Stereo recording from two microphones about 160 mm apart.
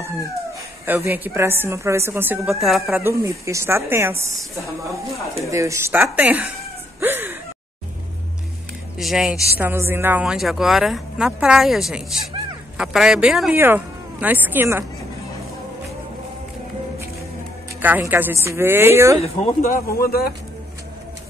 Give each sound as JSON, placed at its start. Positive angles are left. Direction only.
{"t": 0.8, "sound": "speech", "side_deg": -15}
{"t": 2.6, "sound": "speech", "side_deg": 0}
{"t": 3.0, "sound": "speech", "side_deg": -15}
{"t": 5.5, "sound": "speech", "side_deg": -20}
{"t": 7.0, "sound": "a sound", "side_deg": -15}
{"t": 8.9, "sound": "speech", "side_deg": -5}
{"t": 9.6, "sound": "speech", "side_deg": -15}
{"t": 17.8, "sound": "speech", "side_deg": -10}
{"t": 19.2, "sound": "speech", "side_deg": 40}
{"t": 19.7, "sound": "speech", "side_deg": 70}